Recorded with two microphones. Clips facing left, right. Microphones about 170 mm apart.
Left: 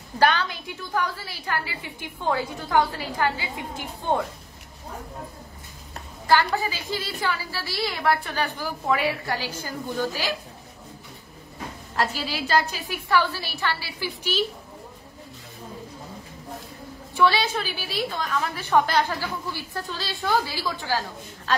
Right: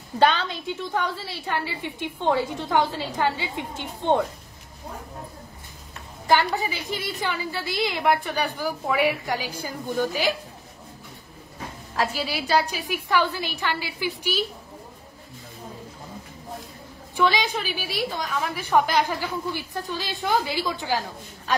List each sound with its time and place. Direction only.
0.2 s a woman's voice: 25° right (ahead or behind)
6.2 s a woman's voice: 15° right (ahead or behind)
12.2 s a woman's voice: 10° right (ahead or behind)
17.2 s a woman's voice: 15° right (ahead or behind)